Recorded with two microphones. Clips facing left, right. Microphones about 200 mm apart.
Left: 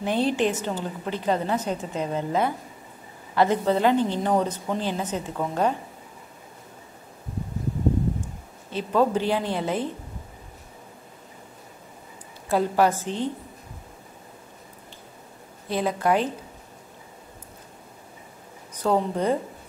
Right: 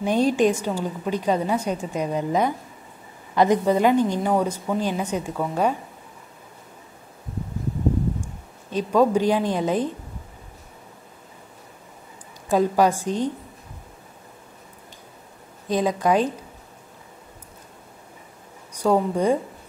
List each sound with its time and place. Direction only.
0.0 s a woman's voice: 15° right (ahead or behind)
8.6 s a woman's voice: 15° right (ahead or behind)
12.4 s a woman's voice: 15° right (ahead or behind)
15.7 s a woman's voice: 15° right (ahead or behind)
18.7 s a woman's voice: 10° right (ahead or behind)